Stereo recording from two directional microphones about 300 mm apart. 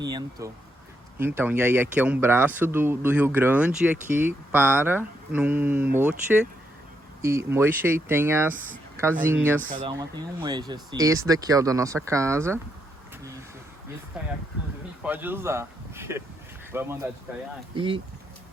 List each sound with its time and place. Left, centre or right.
0.0 s speech: centre
7.2 s speech: centre
9.6 s speech: right
10.4 s speech: centre
14.2 s speech: centre